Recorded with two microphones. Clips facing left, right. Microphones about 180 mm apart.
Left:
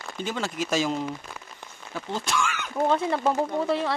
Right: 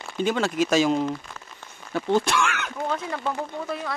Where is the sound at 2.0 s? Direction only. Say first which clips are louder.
Right 7 dB; 65° right (ahead or behind).